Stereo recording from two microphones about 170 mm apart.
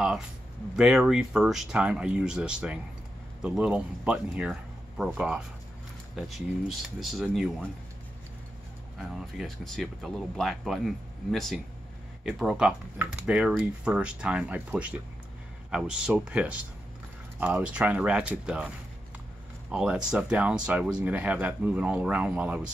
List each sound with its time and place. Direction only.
0.7 s speech: 5° right (ahead or behind)
8.9 s speech: centre (ahead or behind)
19.7 s speech: 5° right (ahead or behind)